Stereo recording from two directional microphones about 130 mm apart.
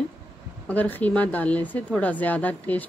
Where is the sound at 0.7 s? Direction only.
15° left (ahead or behind).